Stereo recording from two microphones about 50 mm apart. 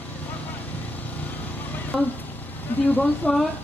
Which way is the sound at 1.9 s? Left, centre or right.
Centre.